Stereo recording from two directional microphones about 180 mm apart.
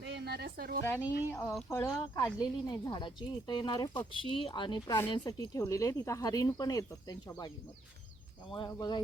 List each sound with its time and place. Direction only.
0.1 s a woman's voice: 65° right (ahead or behind)
0.9 s speech: 10° left (ahead or behind)
8.5 s speech: 25° left (ahead or behind)